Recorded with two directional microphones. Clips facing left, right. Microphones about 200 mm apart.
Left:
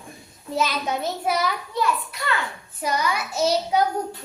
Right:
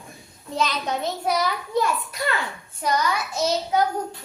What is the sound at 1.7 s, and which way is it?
Speech, 45° right (ahead or behind).